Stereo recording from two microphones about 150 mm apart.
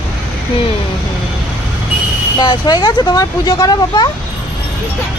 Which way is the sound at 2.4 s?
30° left (ahead or behind).